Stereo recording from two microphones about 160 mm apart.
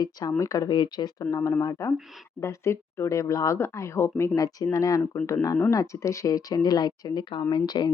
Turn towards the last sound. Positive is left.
turn(degrees=25)  # may be behind; listen again after turning